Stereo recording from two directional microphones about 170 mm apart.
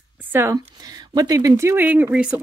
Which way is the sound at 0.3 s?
15° right (ahead or behind).